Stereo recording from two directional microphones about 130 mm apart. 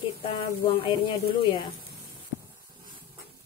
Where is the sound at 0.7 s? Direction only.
45° left (ahead or behind).